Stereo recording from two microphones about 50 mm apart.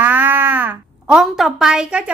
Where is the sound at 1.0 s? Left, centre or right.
Centre.